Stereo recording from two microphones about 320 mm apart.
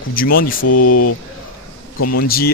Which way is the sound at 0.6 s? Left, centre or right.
Left.